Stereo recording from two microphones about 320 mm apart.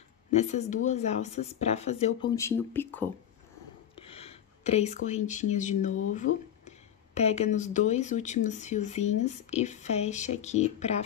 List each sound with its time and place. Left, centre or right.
0.4 s speech: left
2.3 s speech: centre
3.9 s speech: centre